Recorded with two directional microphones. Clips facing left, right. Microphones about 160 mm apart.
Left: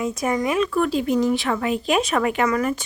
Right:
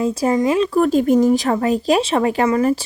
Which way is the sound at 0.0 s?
30° right (ahead or behind).